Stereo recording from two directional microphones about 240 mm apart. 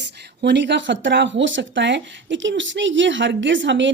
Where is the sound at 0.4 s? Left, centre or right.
Right.